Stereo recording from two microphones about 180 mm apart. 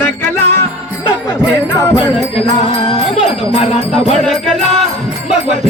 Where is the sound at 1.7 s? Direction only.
15° left (ahead or behind).